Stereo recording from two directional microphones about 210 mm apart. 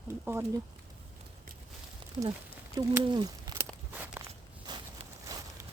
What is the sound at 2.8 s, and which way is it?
Speech, 20° right (ahead or behind).